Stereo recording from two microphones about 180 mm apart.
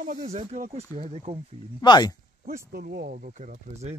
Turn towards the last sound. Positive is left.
turn(degrees=-55)  # may be behind; listen again after turning